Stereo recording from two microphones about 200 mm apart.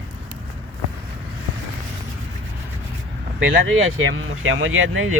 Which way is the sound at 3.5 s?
75° right (ahead or behind).